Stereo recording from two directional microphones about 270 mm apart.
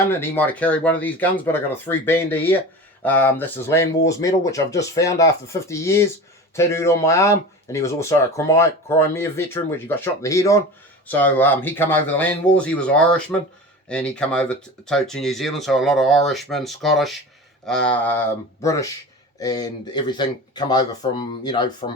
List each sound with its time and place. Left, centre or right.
0.1 s speech: centre